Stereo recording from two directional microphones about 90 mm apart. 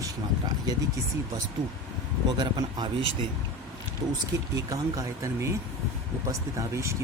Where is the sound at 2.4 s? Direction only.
50° right (ahead or behind).